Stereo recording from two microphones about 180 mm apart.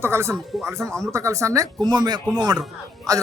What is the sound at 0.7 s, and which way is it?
Speech, 15° right (ahead or behind).